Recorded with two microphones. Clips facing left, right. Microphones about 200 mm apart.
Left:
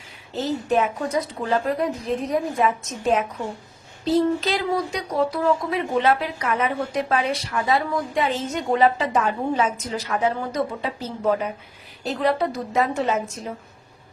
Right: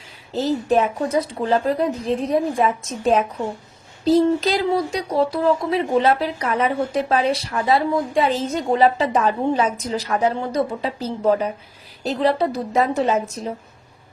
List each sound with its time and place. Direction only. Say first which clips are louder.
0.7 s speech: right 2 dB; 30° right (ahead or behind)